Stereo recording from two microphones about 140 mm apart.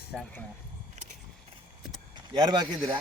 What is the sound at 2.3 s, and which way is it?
Speech, 30° right (ahead or behind).